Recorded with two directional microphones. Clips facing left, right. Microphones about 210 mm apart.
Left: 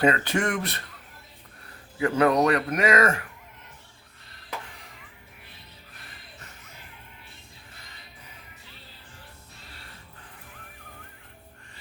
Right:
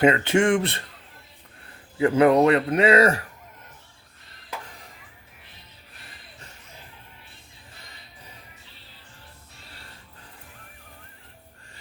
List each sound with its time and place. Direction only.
0.0 s speech: 25° right (ahead or behind)
2.0 s speech: 25° right (ahead or behind)